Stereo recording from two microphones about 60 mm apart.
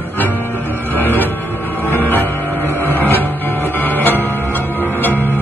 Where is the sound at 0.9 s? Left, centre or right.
Left.